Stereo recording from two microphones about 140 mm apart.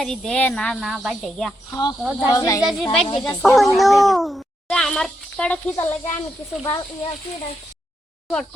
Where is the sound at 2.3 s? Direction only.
25° left (ahead or behind).